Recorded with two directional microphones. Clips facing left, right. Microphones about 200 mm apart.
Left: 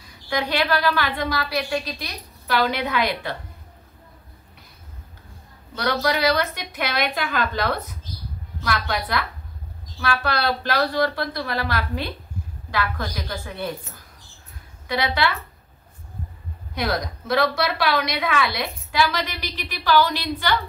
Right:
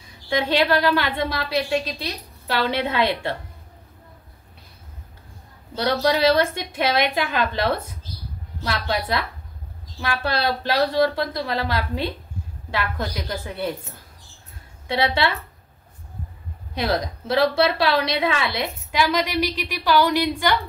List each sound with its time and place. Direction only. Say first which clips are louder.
0.3 s a woman's voice: right 3 dB; 25° right (ahead or behind)
5.9 s a woman's voice: right 3 dB; 25° right (ahead or behind)
14.9 s a woman's voice: right 2 dB; 25° right (ahead or behind)
16.7 s a woman's voice: right 2 dB; 30° right (ahead or behind)